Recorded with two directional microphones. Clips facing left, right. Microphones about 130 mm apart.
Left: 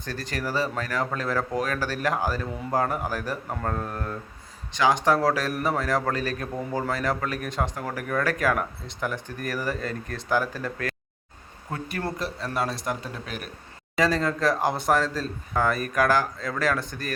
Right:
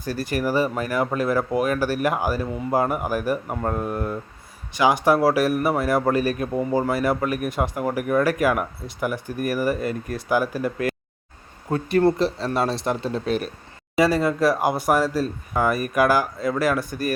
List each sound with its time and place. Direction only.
0.0 s a man's voice: 10° right (ahead or behind)
11.7 s speech: 25° right (ahead or behind)
13.9 s a man's voice: 10° right (ahead or behind)